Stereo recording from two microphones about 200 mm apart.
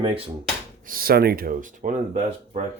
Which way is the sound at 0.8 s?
45° right (ahead or behind).